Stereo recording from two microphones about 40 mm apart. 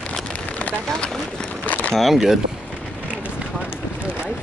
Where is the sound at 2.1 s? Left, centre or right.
Centre.